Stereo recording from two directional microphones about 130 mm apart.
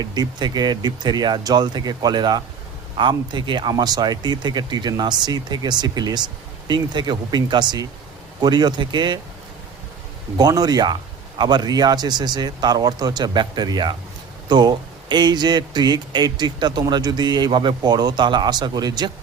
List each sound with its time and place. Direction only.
0.0 s speech: 30° right (ahead or behind)
10.3 s speech: 30° right (ahead or behind)